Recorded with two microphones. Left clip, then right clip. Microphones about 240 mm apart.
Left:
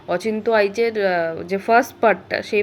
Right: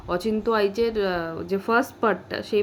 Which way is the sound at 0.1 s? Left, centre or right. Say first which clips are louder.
Left 5 dB; centre.